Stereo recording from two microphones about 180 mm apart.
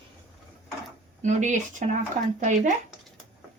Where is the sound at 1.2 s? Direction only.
40° right (ahead or behind).